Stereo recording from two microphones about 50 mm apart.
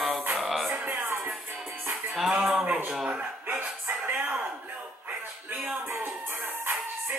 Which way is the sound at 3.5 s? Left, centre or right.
Right.